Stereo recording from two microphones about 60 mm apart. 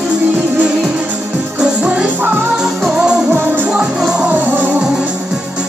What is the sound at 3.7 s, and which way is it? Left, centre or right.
Music, centre.